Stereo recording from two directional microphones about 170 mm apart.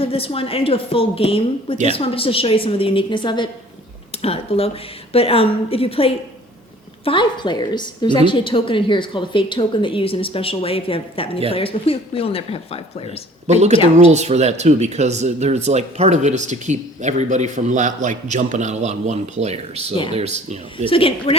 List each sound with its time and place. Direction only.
0.0 s a woman's voice: 35° left (ahead or behind)
13.5 s speech: 40° right (ahead or behind)
20.8 s a woman's voice: 30° left (ahead or behind)